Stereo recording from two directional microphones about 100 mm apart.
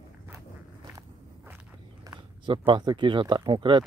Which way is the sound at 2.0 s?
50° right (ahead or behind).